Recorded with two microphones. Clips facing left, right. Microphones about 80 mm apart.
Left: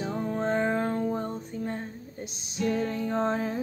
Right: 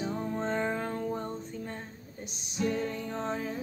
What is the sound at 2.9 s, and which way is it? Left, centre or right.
Music, centre.